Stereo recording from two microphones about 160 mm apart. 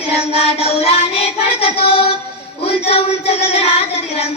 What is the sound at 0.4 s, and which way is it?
Child singing, 40° left (ahead or behind).